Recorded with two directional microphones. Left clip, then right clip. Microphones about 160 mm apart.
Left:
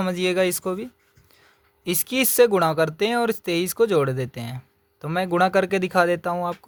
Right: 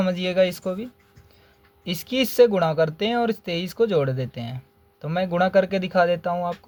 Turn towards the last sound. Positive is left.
turn(degrees=50)  # may be behind; listen again after turning